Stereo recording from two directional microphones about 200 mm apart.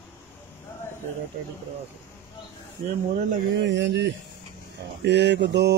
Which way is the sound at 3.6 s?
65° right (ahead or behind).